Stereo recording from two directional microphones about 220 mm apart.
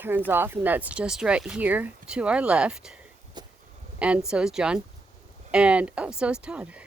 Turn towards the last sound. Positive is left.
turn(degrees=-5)  # may be behind; listen again after turning